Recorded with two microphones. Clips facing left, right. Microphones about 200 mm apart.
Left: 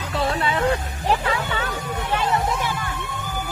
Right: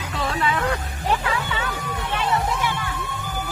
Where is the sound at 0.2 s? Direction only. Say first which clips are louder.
Left 2 dB; 30° left (ahead or behind).